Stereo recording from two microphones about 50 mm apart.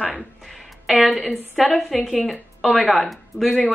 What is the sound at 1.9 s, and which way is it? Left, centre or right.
Speech, centre.